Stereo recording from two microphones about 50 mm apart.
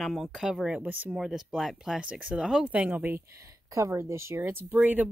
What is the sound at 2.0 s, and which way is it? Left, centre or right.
Speech, right.